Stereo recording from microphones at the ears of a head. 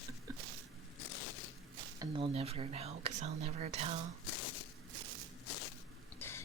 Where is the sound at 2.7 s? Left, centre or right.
Right.